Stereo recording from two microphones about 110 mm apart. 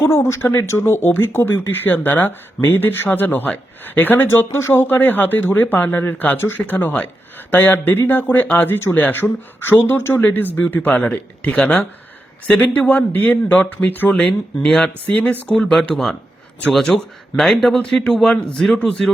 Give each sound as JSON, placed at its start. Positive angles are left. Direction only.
{"t": 0.0, "sound": "speech", "side_deg": 25}